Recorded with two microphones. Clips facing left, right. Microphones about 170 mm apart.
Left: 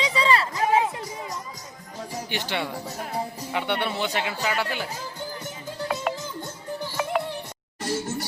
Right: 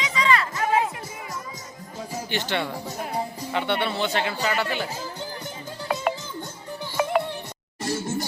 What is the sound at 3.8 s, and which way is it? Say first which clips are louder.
Speech: right 2 dB; 15° left (ahead or behind).